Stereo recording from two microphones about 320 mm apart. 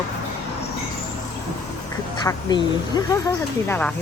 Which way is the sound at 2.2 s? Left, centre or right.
Centre.